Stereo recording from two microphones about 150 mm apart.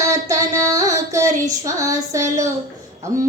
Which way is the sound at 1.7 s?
20° right (ahead or behind).